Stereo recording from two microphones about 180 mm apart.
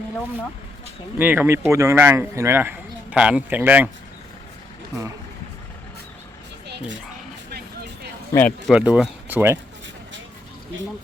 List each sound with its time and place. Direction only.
1.2 s speech: 10° right (ahead or behind)
6.7 s bow-wow: 80° right
8.4 s speech: 10° left (ahead or behind)
8.7 s speech: 5° right (ahead or behind)
9.3 s speech: 15° right (ahead or behind)